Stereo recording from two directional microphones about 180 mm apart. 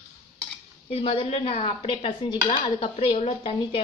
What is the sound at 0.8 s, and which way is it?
Dishes, 30° left (ahead or behind).